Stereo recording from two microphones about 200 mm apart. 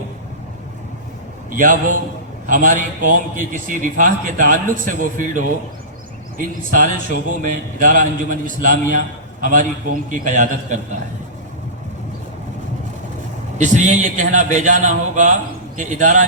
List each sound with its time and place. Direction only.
1.5 s a man's voice: 40° right (ahead or behind)
13.6 s a man's voice: 40° right (ahead or behind)